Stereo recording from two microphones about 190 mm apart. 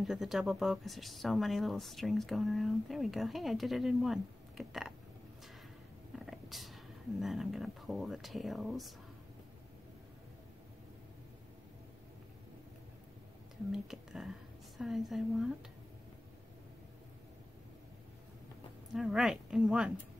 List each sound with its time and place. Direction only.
0.0 s speech: centre (ahead or behind)
6.1 s speech: centre (ahead or behind)
13.7 s speech: centre (ahead or behind)
18.9 s speech: centre (ahead or behind)